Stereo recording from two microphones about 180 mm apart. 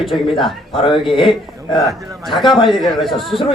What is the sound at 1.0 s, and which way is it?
A man's voice, centre (ahead or behind).